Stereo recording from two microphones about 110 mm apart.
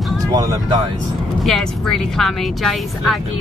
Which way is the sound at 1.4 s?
5° left (ahead or behind).